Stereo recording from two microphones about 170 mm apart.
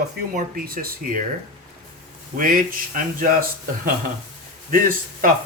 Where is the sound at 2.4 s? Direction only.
55° right (ahead or behind).